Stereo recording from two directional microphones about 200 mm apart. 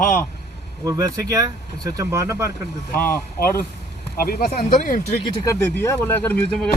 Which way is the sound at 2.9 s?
45° left (ahead or behind).